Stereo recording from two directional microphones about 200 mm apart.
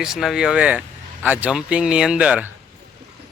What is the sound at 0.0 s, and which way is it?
Speech, centre (ahead or behind).